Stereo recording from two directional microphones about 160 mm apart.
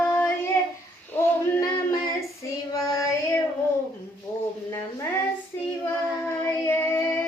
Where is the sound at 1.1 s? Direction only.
15° left (ahead or behind).